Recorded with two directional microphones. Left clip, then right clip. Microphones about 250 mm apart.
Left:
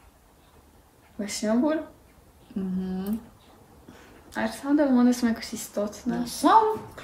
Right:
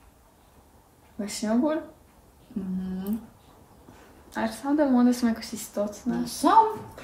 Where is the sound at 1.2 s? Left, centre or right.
Centre.